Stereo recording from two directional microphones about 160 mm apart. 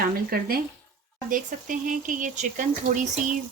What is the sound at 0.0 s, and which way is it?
Speech, 65° right (ahead or behind).